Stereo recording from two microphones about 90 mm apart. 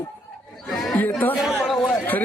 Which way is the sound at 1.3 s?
5° right (ahead or behind).